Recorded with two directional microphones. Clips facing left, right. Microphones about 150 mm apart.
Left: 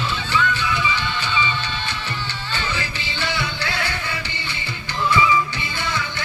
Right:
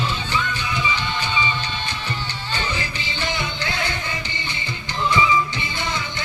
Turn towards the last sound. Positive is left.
turn(degrees=-20)  # may be behind; listen again after turning